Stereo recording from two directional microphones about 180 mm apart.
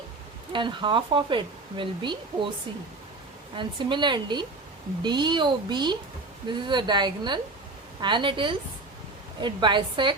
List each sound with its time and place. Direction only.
0.5 s speech: 25° right (ahead or behind)
3.6 s speech: 25° right (ahead or behind)